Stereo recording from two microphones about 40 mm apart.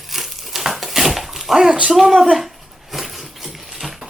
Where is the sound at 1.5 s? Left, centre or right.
Centre.